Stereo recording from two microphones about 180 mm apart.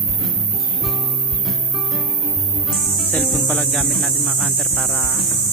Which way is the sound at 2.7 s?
Centre (ahead or behind).